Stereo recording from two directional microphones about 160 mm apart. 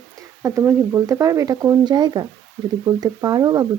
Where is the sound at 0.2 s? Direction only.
20° right (ahead or behind).